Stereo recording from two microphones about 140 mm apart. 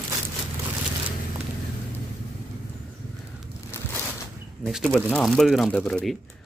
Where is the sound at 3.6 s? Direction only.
15° left (ahead or behind).